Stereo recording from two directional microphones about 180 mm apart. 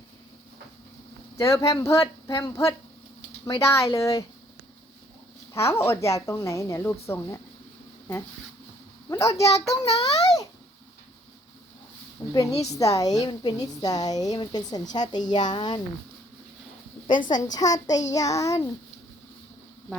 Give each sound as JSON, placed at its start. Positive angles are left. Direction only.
{"t": 1.4, "sound": "speech", "side_deg": 15}
{"t": 5.5, "sound": "speech", "side_deg": 15}
{"t": 9.0, "sound": "a woman's voice", "side_deg": 15}
{"t": 9.6, "sound": "child singing", "side_deg": 35}
{"t": 10.0, "sound": "a woman's voice", "side_deg": 20}
{"t": 12.2, "sound": "a sound", "side_deg": 25}
{"t": 12.7, "sound": "a woman's voice", "side_deg": 20}
{"t": 17.2, "sound": "a woman's voice", "side_deg": 20}